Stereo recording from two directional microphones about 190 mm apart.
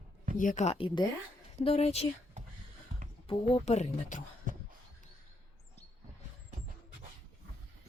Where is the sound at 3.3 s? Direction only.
35° left (ahead or behind).